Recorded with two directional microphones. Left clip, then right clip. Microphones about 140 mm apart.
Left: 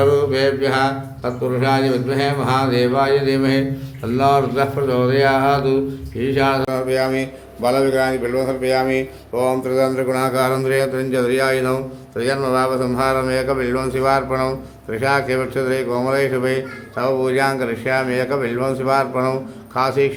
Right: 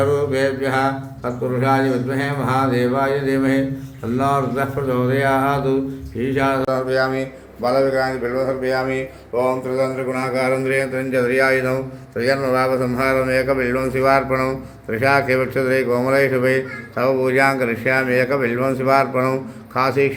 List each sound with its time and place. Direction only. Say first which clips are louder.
0.0 s speech: left 3 dB; 15° left (ahead or behind); by 10.6 s 35° left (ahead or behind)
10.7 s speech: left 2 dB; 20° left (ahead or behind)
11.1 s a man's voice: right 3 dB; 5° left (ahead or behind); by 20.1 s 15° right (ahead or behind)